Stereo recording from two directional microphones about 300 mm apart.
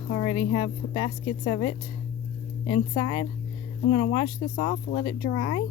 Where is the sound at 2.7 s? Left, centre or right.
Centre.